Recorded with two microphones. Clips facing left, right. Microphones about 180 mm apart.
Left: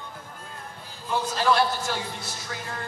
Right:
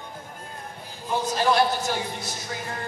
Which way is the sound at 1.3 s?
15° right (ahead or behind).